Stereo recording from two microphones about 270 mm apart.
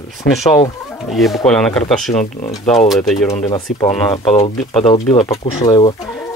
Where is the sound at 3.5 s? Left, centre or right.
Centre.